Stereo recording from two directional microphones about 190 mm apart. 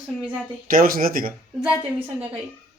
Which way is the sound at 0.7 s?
50° right (ahead or behind).